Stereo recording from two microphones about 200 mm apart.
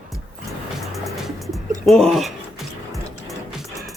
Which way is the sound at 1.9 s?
Centre (ahead or behind).